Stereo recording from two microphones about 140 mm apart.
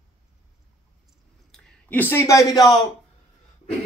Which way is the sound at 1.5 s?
10° left (ahead or behind).